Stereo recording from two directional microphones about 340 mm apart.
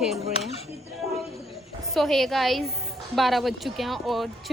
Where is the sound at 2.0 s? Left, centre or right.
Centre.